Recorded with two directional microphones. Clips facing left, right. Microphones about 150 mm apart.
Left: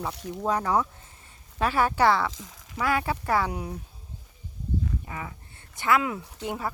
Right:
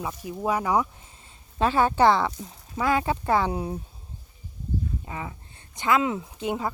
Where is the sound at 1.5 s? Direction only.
25° right (ahead or behind).